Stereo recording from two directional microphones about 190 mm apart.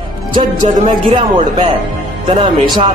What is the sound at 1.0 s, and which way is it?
Speech, 25° right (ahead or behind).